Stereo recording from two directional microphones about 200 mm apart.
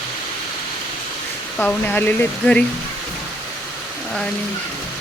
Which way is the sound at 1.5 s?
10° left (ahead or behind).